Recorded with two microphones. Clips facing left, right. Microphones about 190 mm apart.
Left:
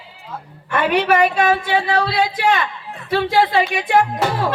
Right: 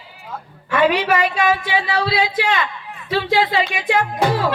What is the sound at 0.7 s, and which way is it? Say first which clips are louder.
A woman's voice: even; 55° left (ahead or behind).